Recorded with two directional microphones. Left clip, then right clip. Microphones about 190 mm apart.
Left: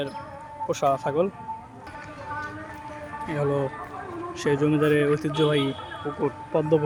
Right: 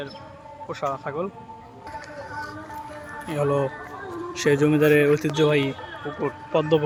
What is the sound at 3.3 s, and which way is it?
Speech, centre (ahead or behind).